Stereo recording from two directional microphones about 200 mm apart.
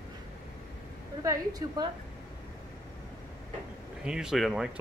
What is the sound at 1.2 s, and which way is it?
Speech, 15° right (ahead or behind).